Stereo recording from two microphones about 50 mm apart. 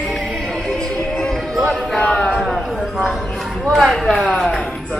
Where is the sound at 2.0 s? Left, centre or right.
Centre.